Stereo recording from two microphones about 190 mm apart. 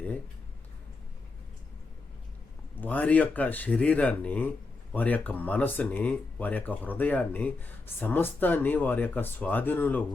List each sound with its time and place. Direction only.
2.8 s speech: 10° left (ahead or behind)